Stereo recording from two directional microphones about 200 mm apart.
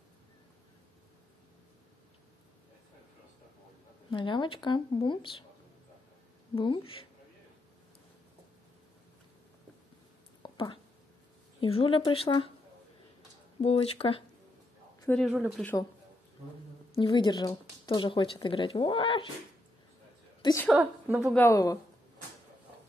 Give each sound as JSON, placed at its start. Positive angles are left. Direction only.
{"t": 4.1, "sound": "speech", "side_deg": 25}
{"t": 6.5, "sound": "speech", "side_deg": 25}
{"t": 10.4, "sound": "a sound", "side_deg": 25}
{"t": 11.6, "sound": "speech", "side_deg": 25}
{"t": 13.6, "sound": "speech", "side_deg": 30}
{"t": 15.0, "sound": "speech", "side_deg": 0}
{"t": 16.9, "sound": "speech", "side_deg": 25}
{"t": 20.7, "sound": "a woman's voice", "side_deg": -5}
{"t": 21.3, "sound": "a woman's voice", "side_deg": 10}